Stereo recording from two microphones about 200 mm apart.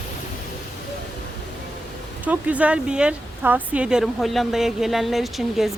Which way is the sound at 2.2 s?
5° right (ahead or behind).